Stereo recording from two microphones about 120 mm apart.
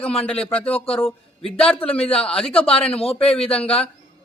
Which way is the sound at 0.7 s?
50° left (ahead or behind).